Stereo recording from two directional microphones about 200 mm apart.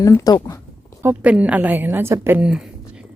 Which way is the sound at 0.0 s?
15° left (ahead or behind).